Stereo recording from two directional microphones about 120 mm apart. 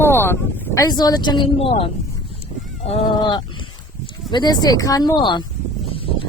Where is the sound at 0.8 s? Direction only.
35° left (ahead or behind).